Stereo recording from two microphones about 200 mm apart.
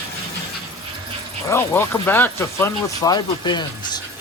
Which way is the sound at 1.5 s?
10° left (ahead or behind).